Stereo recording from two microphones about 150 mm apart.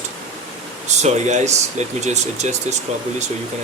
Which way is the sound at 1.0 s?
50° right (ahead or behind).